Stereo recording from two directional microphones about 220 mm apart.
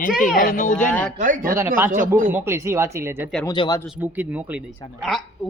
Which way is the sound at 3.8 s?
5° right (ahead or behind).